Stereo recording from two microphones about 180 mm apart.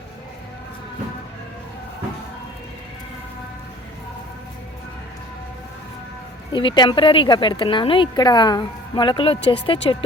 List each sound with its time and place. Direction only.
6.5 s a woman's voice: 25° left (ahead or behind)